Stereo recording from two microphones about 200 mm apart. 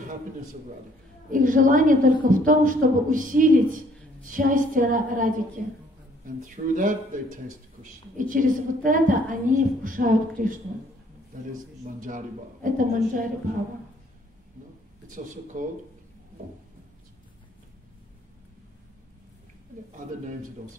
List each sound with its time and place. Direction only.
1.3 s speech: 40° right (ahead or behind)
8.2 s speech: 40° right (ahead or behind)
11.8 s speech: 40° right (ahead or behind)
15.0 s speech: 40° right (ahead or behind)